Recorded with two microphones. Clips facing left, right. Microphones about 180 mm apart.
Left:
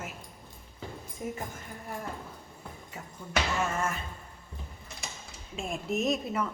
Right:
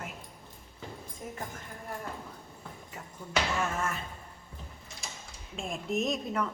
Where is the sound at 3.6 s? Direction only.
Centre (ahead or behind).